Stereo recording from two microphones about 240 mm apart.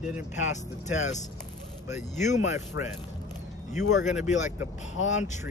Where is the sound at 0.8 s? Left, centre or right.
Left.